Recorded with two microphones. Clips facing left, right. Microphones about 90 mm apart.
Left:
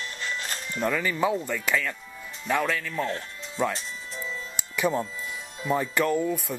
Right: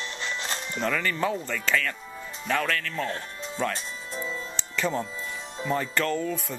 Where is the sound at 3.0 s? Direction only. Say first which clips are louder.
Left 1 dB; 30° right (ahead or behind).